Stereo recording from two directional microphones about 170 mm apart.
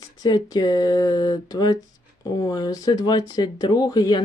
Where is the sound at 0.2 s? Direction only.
25° left (ahead or behind).